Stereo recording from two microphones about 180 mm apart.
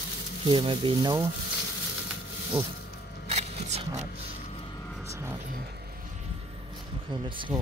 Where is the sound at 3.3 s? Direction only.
40° right (ahead or behind).